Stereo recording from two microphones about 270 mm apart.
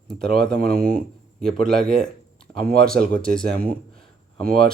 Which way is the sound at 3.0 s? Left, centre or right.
Right.